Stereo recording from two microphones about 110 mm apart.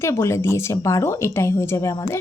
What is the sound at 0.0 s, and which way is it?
Speech, 25° left (ahead or behind).